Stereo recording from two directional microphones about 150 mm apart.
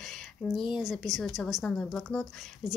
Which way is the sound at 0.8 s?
5° right (ahead or behind).